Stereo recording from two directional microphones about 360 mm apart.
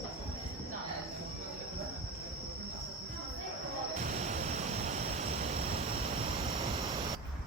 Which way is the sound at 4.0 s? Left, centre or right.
Centre.